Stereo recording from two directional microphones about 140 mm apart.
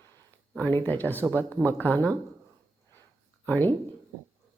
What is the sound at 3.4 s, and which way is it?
Speech, 15° left (ahead or behind).